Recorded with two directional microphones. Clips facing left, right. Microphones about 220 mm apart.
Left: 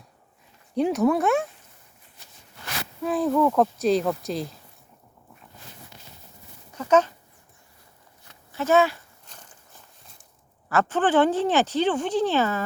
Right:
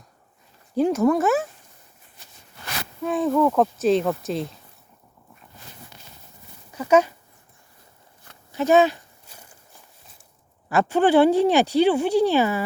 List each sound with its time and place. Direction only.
0.7 s speech: centre (ahead or behind)
3.0 s speech: centre (ahead or behind)
6.7 s a sound: 10° right (ahead or behind)
8.5 s speech: 15° right (ahead or behind)
9.2 s walk: 10° right (ahead or behind)
10.7 s speech: 15° right (ahead or behind)